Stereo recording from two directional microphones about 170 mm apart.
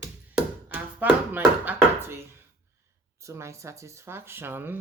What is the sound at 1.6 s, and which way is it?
Chopping, 15° right (ahead or behind).